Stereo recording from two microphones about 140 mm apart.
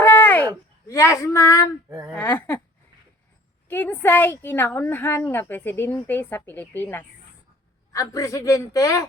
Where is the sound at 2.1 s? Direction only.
10° left (ahead or behind).